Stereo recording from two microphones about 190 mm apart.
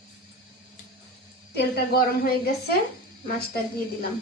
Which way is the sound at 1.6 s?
55° left (ahead or behind).